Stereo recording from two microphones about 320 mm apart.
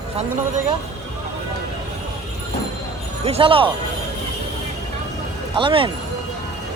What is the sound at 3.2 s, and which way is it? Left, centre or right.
Speech, centre.